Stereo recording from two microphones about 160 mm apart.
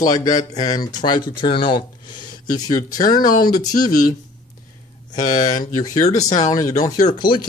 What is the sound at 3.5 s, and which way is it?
Speech, 25° left (ahead or behind).